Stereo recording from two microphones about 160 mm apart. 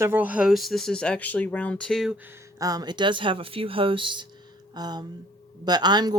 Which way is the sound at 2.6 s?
25° right (ahead or behind).